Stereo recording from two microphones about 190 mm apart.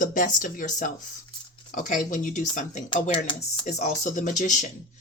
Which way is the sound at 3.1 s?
25° left (ahead or behind).